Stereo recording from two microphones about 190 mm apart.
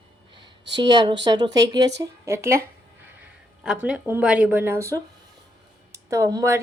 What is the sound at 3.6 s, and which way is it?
Speech, 5° right (ahead or behind).